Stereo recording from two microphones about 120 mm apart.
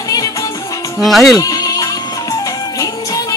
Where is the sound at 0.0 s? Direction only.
30° left (ahead or behind).